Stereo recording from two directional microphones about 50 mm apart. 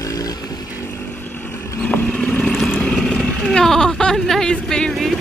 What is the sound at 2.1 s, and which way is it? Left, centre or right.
Motorcycle, centre.